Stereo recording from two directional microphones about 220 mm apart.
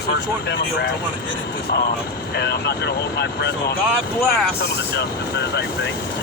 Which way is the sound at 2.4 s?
50° left (ahead or behind).